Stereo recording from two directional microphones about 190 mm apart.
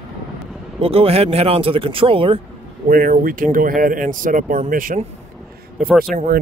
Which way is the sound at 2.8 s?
45° right (ahead or behind).